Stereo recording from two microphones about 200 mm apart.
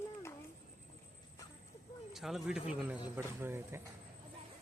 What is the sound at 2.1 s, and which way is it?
A man's voice, centre (ahead or behind).